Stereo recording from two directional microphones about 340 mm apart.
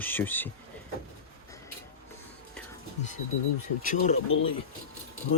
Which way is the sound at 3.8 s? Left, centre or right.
Left.